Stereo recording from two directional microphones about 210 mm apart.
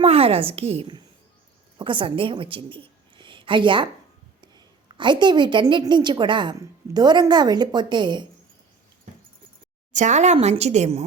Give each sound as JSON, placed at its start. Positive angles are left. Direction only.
{"t": 0.0, "sound": "a woman's voice", "side_deg": -30}
{"t": 9.9, "sound": "speech", "side_deg": -35}